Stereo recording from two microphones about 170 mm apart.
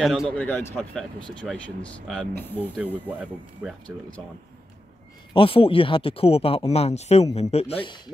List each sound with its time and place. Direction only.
0.0 s speech: centre (ahead or behind)
2.8 s speech: 10° right (ahead or behind)
5.3 s speech: 30° left (ahead or behind)